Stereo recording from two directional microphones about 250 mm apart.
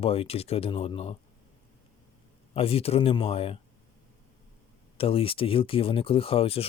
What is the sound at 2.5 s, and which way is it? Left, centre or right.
Speech, left.